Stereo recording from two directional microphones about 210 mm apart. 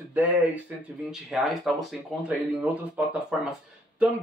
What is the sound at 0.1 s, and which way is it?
Speech, 10° right (ahead or behind).